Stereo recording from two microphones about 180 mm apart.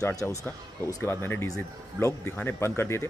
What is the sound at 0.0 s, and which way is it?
Speech, 20° left (ahead or behind).